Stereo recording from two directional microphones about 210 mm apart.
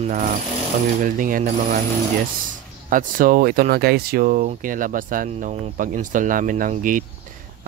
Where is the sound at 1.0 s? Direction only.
40° right (ahead or behind).